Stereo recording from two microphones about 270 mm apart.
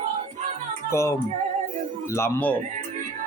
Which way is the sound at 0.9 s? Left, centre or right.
Centre.